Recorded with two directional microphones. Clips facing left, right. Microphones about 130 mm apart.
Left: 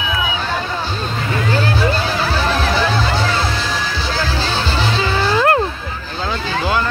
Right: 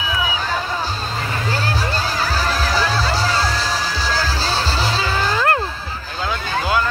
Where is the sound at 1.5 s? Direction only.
35° right (ahead or behind).